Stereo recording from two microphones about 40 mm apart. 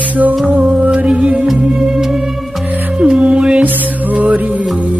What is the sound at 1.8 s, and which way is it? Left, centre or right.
Music, centre.